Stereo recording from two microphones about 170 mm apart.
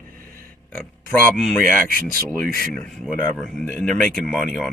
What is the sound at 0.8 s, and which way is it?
Speech, 55° right (ahead or behind).